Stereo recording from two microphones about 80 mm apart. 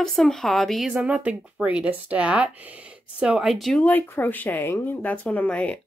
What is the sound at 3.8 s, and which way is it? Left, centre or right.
Speech, left.